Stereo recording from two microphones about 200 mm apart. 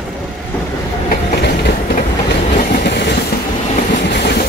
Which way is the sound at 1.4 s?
55° left (ahead or behind).